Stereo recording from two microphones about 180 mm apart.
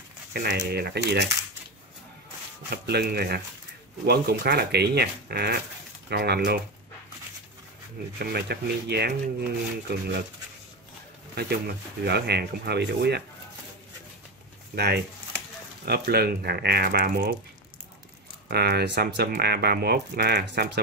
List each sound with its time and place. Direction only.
0.3 s speech: 60° right (ahead or behind)
2.7 s speech: 65° right (ahead or behind)
8.3 s speech: 65° right (ahead or behind)
11.3 s speech: 60° right (ahead or behind)
15.8 s speech: 60° right (ahead or behind)
18.5 s speech: 65° right (ahead or behind)